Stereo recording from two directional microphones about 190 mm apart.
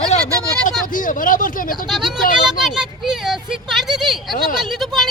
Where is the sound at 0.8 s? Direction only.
45° left (ahead or behind).